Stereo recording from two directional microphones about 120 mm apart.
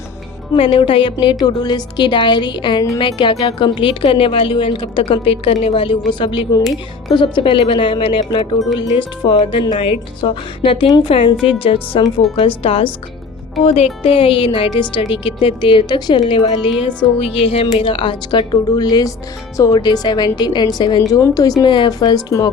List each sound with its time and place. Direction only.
0.5 s a woman's voice: 50° left (ahead or behind)
8.5 s speech: 30° left (ahead or behind)
9.0 s a woman's voice: 40° left (ahead or behind); by 21.5 s 25° left (ahead or behind)
21.6 s a woman's voice: 40° left (ahead or behind)